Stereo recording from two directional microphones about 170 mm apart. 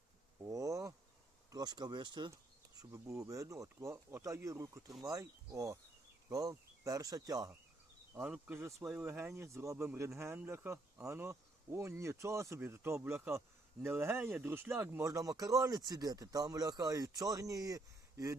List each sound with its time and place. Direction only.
0.4 s bee: 20° right (ahead or behind)
1.5 s speech: 25° right (ahead or behind)
8.2 s speech: 5° right (ahead or behind)